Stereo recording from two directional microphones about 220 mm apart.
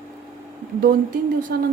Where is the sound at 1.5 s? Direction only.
45° right (ahead or behind).